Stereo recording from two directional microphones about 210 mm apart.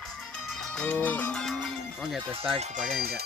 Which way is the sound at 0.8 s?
5° left (ahead or behind).